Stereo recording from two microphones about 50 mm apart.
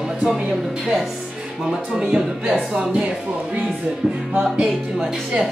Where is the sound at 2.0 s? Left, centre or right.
Centre.